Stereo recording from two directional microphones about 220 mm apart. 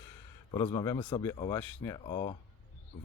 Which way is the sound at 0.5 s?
20° left (ahead or behind).